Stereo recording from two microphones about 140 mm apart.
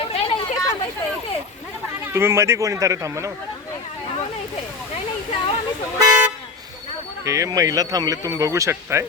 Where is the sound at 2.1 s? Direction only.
20° right (ahead or behind).